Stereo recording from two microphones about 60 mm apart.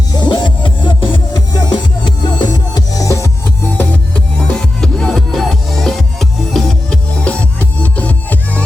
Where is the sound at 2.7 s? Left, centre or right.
Left.